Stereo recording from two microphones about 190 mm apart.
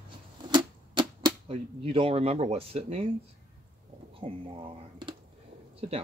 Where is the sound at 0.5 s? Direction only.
25° right (ahead or behind).